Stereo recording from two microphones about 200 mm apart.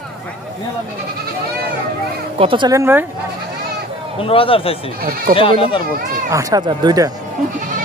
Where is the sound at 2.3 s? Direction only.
25° right (ahead or behind).